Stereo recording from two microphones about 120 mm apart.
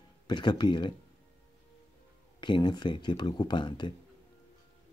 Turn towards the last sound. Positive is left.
turn(degrees=40)  # may be behind; listen again after turning